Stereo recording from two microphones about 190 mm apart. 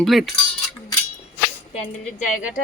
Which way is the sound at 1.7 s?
40° left (ahead or behind).